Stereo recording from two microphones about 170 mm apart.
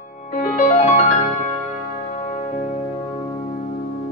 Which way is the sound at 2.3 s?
40° left (ahead or behind).